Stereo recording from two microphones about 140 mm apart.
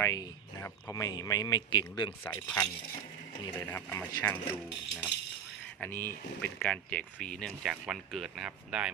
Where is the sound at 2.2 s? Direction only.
15° left (ahead or behind).